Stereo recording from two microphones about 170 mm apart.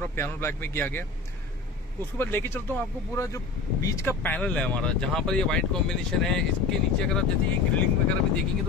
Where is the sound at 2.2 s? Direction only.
15° left (ahead or behind).